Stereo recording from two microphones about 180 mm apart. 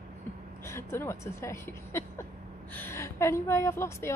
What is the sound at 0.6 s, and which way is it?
A woman's voice, 15° left (ahead or behind).